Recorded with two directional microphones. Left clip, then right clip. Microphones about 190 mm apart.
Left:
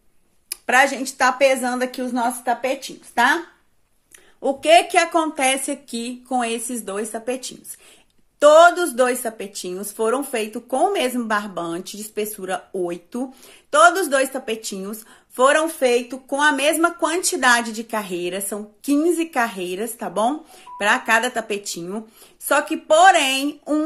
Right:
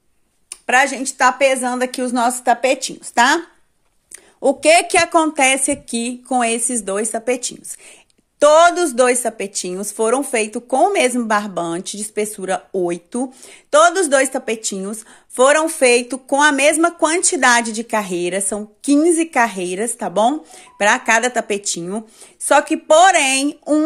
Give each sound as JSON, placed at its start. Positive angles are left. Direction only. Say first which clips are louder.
{"t": 0.7, "sound": "a woman's voice", "louder": "right 2 dB", "side_deg": -15}
{"t": 1.9, "sound": "speech", "louder": "right 5 dB", "side_deg": -40}
{"t": 4.4, "sound": "a woman's voice", "louder": "right 2 dB", "side_deg": -40}